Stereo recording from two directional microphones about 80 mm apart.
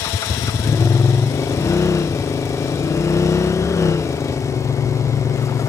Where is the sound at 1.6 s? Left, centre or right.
Left.